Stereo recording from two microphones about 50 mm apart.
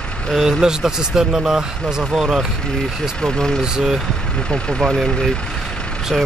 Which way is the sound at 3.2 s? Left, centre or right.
Centre.